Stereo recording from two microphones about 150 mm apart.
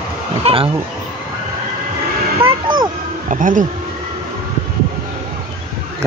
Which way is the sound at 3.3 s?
60° right (ahead or behind).